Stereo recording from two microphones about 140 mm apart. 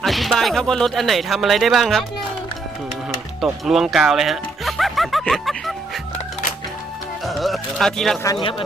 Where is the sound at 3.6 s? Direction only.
Centre (ahead or behind).